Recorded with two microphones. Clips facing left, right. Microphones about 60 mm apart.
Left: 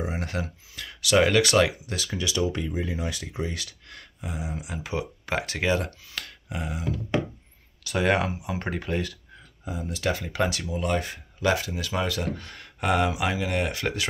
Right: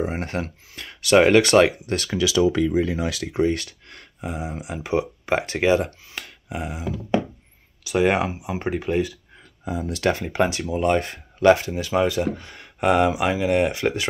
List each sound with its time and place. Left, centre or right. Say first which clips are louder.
0.0 s speech: right 5 dB; right
1.8 s speech: right 7 dB; right
2.7 s speech: right 8 dB; right
3.5 s speech: right 6 dB; right
6.0 s a sound: right 2 dB; right
7.8 s speech: right 4 dB; centre
9.7 s speech: right 6 dB; right
10.3 s speech: right 5 dB; right
11.5 s speech: right 5 dB; right